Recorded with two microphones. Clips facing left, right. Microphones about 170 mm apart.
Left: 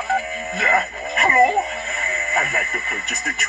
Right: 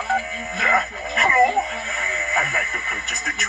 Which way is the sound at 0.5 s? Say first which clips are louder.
Left 1 dB; 30° left (ahead or behind).